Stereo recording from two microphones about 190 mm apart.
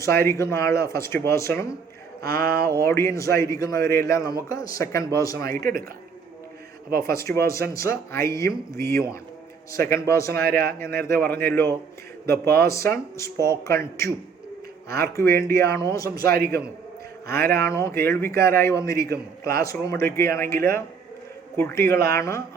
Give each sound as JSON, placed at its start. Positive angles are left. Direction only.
{"t": 0.0, "sound": "a man's voice", "side_deg": 15}
{"t": 2.2, "sound": "a sound", "side_deg": -55}
{"t": 2.7, "sound": "a man's voice", "side_deg": 15}
{"t": 5.5, "sound": "a sound", "side_deg": -50}
{"t": 7.0, "sound": "a man's voice", "side_deg": 15}
{"t": 10.4, "sound": "a sound", "side_deg": -55}
{"t": 10.8, "sound": "a man's voice", "side_deg": 15}
{"t": 14.8, "sound": "speech", "side_deg": -55}
{"t": 15.6, "sound": "a man's voice", "side_deg": 15}
{"t": 16.2, "sound": "a sound", "side_deg": -55}
{"t": 17.5, "sound": "a man's voice", "side_deg": 15}
{"t": 18.9, "sound": "a man's voice", "side_deg": -55}
{"t": 19.6, "sound": "a man's voice", "side_deg": 15}